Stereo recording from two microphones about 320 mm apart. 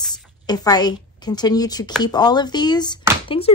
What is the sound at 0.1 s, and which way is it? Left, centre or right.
A woman's voice, centre.